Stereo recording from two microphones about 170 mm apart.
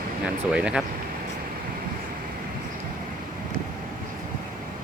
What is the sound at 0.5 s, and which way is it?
Speech, 5° right (ahead or behind).